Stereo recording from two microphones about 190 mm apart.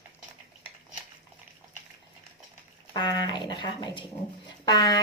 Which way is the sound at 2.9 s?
20° left (ahead or behind).